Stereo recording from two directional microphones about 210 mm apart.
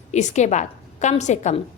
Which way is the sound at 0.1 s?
35° left (ahead or behind).